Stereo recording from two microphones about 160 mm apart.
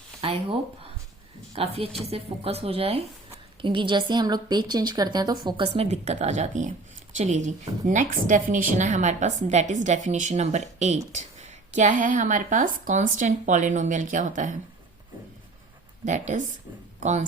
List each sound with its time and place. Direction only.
0.2 s a woman's voice: 35° right (ahead or behind)
16.0 s a woman's voice: 50° right (ahead or behind)